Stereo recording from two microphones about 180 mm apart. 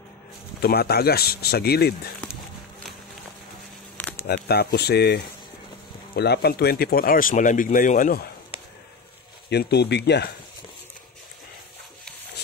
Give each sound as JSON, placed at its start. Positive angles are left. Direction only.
{"t": 0.6, "sound": "speech", "side_deg": 60}
{"t": 3.9, "sound": "a sound", "side_deg": 10}
{"t": 4.5, "sound": "speech", "side_deg": 65}
{"t": 9.5, "sound": "speech", "side_deg": 65}